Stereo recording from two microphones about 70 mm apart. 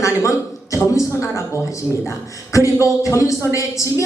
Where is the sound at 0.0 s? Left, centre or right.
Left.